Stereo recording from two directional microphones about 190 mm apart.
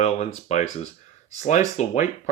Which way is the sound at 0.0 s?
35° left (ahead or behind).